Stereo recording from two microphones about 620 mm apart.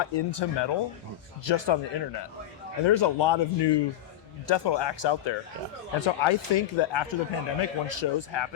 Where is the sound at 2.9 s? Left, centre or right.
Left.